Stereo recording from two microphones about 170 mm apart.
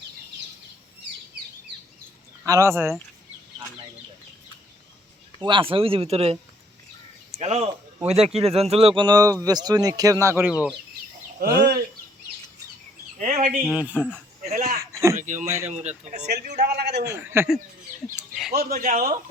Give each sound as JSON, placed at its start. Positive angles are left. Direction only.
{"t": 2.4, "sound": "speech", "side_deg": -15}
{"t": 5.4, "sound": "speech", "side_deg": -30}
{"t": 11.3, "sound": "speech", "side_deg": -60}
{"t": 13.1, "sound": "a sound", "side_deg": -45}
{"t": 13.7, "sound": "speech", "side_deg": -10}
{"t": 14.5, "sound": "a sound", "side_deg": -50}
{"t": 14.8, "sound": "a sound", "side_deg": -15}
{"t": 15.2, "sound": "speech", "side_deg": -45}
{"t": 15.4, "sound": "speech", "side_deg": -15}
{"t": 15.7, "sound": "speech", "side_deg": -40}
{"t": 16.2, "sound": "a man's voice", "side_deg": -70}
{"t": 17.1, "sound": "speech", "side_deg": -15}
{"t": 18.5, "sound": "speech", "side_deg": -55}